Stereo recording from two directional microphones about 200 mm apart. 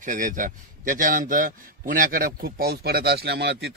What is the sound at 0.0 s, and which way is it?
A man's voice, 40° right (ahead or behind).